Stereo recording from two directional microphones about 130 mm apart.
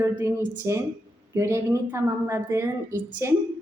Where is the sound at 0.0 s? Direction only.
20° right (ahead or behind).